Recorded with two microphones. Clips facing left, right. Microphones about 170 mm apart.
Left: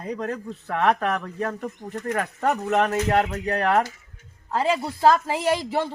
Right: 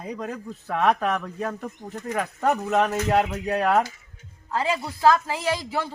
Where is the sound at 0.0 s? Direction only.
Centre (ahead or behind).